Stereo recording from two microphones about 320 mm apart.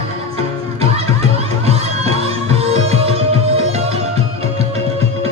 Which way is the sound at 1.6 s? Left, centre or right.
Centre.